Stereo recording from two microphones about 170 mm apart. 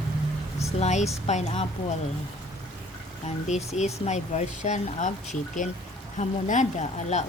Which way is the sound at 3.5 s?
40° left (ahead or behind).